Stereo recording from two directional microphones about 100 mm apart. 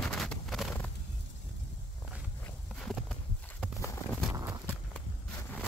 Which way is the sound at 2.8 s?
5° left (ahead or behind).